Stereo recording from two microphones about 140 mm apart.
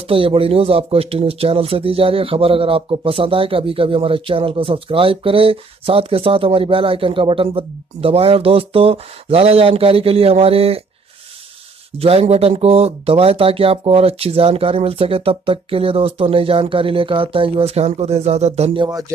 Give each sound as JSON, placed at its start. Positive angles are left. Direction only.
{"t": 0.1, "sound": "speech", "side_deg": -40}
{"t": 12.0, "sound": "speech", "side_deg": -45}
{"t": 18.8, "sound": "speech", "side_deg": -25}